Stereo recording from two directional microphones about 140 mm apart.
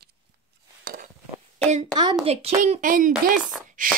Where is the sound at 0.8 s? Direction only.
90° right.